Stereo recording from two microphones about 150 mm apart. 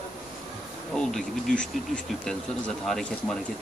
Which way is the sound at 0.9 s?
5° left (ahead or behind).